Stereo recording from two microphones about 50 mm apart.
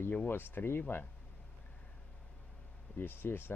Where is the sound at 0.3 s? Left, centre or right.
Left.